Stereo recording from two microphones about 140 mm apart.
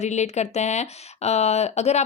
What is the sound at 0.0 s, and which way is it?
Speech, 55° left (ahead or behind).